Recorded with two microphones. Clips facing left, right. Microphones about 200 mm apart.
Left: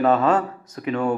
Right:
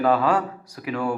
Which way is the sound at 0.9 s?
25° left (ahead or behind).